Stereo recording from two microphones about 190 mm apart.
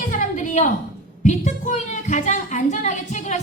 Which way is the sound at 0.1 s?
45° left (ahead or behind).